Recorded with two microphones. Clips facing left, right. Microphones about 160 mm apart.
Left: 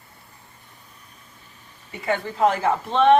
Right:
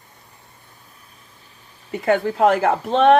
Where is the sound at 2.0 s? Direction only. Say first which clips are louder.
Right 4 dB; 65° right (ahead or behind).